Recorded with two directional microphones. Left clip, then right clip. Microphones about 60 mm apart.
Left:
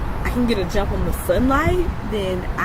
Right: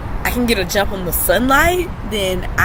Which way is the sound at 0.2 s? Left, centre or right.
Right.